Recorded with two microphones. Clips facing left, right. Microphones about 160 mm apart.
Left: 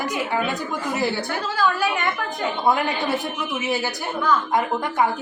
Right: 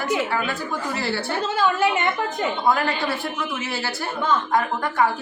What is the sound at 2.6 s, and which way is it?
A woman's voice, 20° left (ahead or behind).